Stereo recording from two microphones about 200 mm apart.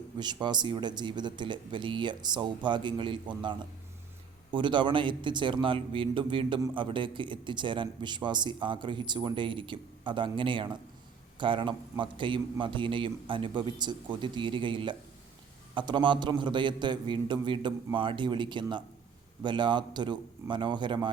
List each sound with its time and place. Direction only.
0.2 s a man's voice: 20° right (ahead or behind)